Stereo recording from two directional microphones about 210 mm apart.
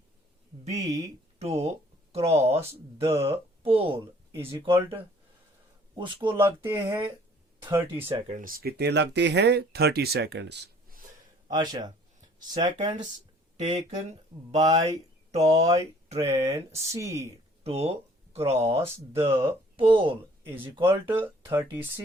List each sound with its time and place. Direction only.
0.7 s speech: 15° right (ahead or behind)
1.4 s speech: 30° right (ahead or behind)
6.7 s speech: 10° right (ahead or behind)
8.1 s speech: 35° right (ahead or behind)
11.4 s speech: 20° right (ahead or behind)
13.6 s speech: 30° right (ahead or behind)
15.3 s speech: 30° right (ahead or behind)
16.2 s speech: 15° right (ahead or behind)
17.6 s speech: 30° right (ahead or behind)
18.9 s speech: 10° right (ahead or behind)
19.7 s speech: 25° right (ahead or behind)
20.8 s speech: 10° right (ahead or behind)